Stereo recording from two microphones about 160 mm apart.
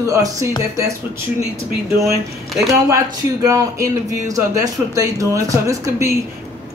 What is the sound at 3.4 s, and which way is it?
Speech, 20° right (ahead or behind).